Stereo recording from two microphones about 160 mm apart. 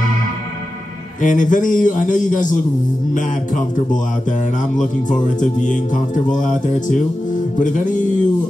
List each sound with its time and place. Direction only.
1.2 s music: 55° left (ahead or behind)
5.4 s music: 50° left (ahead or behind)